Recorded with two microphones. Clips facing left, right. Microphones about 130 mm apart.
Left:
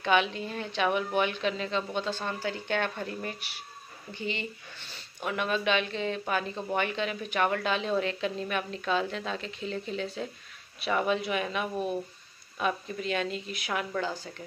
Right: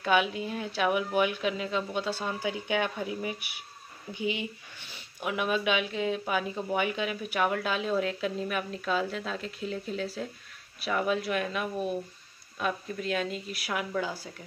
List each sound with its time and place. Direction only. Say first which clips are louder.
0.0 s speech: even; 5° right (ahead or behind)